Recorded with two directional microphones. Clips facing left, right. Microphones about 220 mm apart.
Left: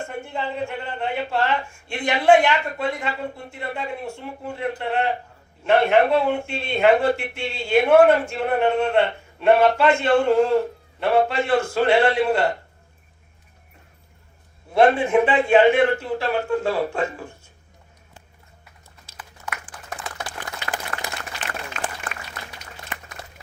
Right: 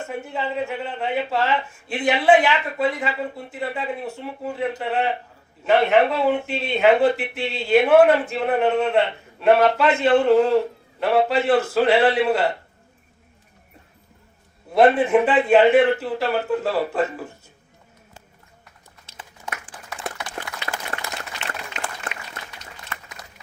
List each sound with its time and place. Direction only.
0.0 s speech: 5° right (ahead or behind)
14.7 s speech: centre (ahead or behind)
19.0 s a sound: 25° right (ahead or behind)
20.7 s applause: 20° left (ahead or behind)
21.7 s applause: 20° right (ahead or behind)